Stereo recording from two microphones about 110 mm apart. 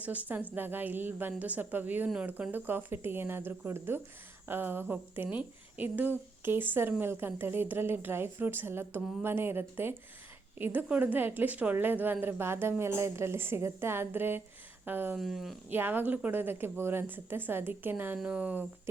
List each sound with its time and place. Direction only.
0.0 s a woman's voice: 15° right (ahead or behind)
15.1 s speech: centre (ahead or behind)
15.7 s a woman's voice: 20° right (ahead or behind)